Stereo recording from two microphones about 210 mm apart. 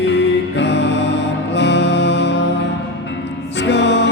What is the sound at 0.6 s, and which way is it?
Music, 55° left (ahead or behind).